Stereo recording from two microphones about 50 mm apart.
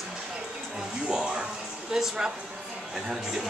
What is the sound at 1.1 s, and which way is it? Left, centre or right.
A man's voice, centre.